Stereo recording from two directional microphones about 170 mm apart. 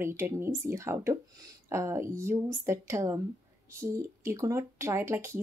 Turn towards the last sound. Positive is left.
turn(degrees=-15)  # may be behind; listen again after turning